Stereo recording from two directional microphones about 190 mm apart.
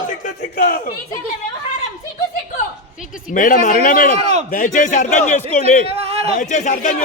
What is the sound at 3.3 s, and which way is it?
A man's voice, 45° left (ahead or behind).